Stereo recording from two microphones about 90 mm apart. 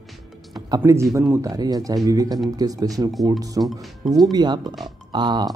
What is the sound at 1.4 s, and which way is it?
Speech, 45° right (ahead or behind).